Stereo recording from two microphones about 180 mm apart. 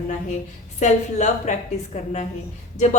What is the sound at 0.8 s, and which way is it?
Speech, 40° left (ahead or behind).